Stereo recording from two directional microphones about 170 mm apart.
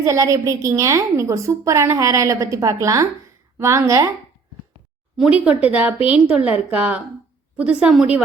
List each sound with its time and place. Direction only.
0.0 s a woman's voice: 20° right (ahead or behind)
5.1 s a woman's voice: 5° right (ahead or behind)